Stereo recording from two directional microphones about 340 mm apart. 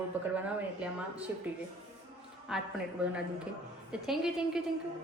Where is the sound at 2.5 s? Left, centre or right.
Centre.